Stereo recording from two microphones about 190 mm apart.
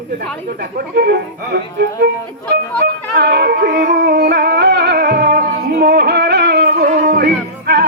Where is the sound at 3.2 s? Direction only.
60° right (ahead or behind).